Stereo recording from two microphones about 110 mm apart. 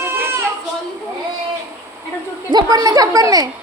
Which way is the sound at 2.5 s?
35° right (ahead or behind).